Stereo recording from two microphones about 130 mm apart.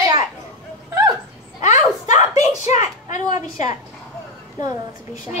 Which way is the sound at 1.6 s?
65° left (ahead or behind).